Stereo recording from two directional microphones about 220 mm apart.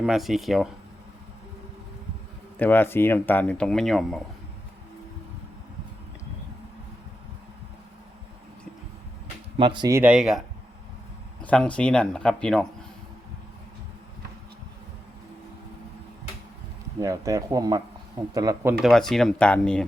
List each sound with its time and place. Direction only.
0.0 s speech: centre (ahead or behind)
2.6 s speech: 10° left (ahead or behind)
9.6 s speech: 20° right (ahead or behind)
10.0 s speech: 5° right (ahead or behind)
11.4 s speech: 5° left (ahead or behind)
17.0 s speech: 15° right (ahead or behind)
18.9 s speech: centre (ahead or behind)